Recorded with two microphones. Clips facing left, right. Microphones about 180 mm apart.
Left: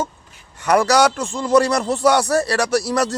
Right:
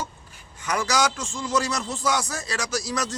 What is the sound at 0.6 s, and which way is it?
Speech, 65° left (ahead or behind).